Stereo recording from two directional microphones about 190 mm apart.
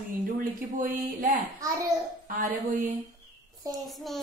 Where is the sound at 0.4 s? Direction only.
45° right (ahead or behind).